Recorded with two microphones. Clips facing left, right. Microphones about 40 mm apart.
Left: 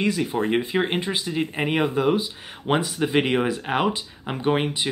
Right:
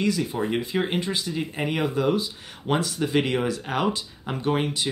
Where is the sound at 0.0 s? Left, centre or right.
Left.